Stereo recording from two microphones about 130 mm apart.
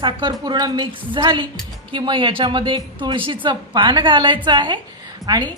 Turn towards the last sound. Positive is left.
turn(degrees=-30)  # may be behind; listen again after turning